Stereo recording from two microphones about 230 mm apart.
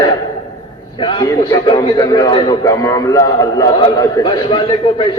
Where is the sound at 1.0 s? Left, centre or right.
Left.